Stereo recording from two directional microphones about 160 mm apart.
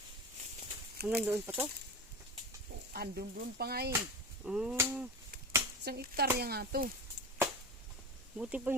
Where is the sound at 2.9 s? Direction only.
80° right.